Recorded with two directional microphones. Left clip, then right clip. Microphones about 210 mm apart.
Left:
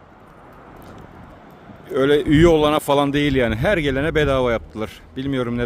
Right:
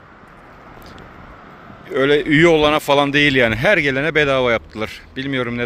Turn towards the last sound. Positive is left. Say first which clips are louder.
# right 2 dB
turn(degrees=15)  # may be behind; listen again after turning